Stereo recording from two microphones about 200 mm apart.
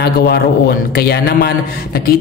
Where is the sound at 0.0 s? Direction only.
50° left (ahead or behind).